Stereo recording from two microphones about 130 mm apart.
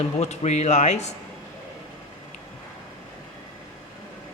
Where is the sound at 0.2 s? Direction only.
60° left (ahead or behind).